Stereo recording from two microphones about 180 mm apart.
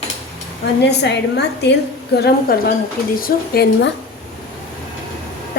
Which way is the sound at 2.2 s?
60° left (ahead or behind).